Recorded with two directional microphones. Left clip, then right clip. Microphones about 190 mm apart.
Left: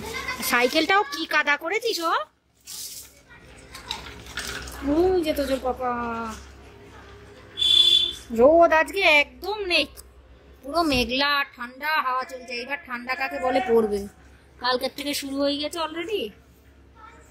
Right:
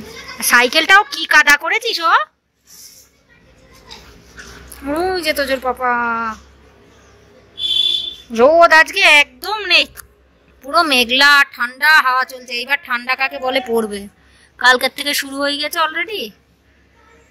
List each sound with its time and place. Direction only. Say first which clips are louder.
0.5 s a woman's voice: right 10 dB; 5° left (ahead or behind)
4.9 s a woman's voice: right 4 dB; 5° left (ahead or behind)
8.5 s a woman's voice: right 9 dB; 10° left (ahead or behind)